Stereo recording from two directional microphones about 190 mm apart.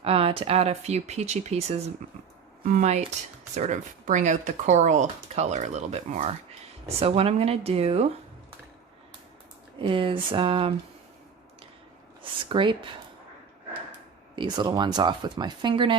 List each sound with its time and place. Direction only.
0.0 s speech: 30° right (ahead or behind)
9.7 s speech: 25° right (ahead or behind)
12.5 s speech: 25° right (ahead or behind)
14.3 s speech: 25° right (ahead or behind)